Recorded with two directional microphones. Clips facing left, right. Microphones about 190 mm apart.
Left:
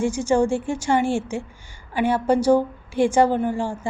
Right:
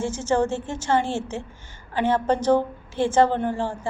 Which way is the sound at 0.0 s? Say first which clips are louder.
Left 3 dB; 15° left (ahead or behind).